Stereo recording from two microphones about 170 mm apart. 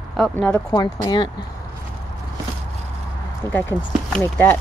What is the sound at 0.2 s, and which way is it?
Speech, 5° left (ahead or behind).